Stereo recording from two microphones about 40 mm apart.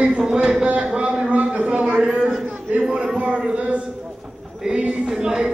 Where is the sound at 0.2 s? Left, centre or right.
Centre; by 2.0 s right.